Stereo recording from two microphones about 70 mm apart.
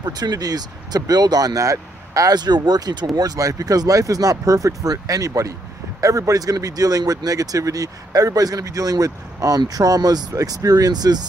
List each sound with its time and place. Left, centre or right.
0.0 s speech: right
2.3 s speech: right